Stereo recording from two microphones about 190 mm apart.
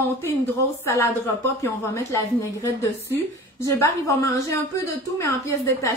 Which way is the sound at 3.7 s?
15° left (ahead or behind).